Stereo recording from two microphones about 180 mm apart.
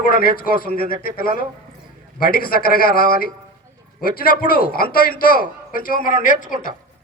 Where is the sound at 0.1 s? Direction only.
55° left (ahead or behind).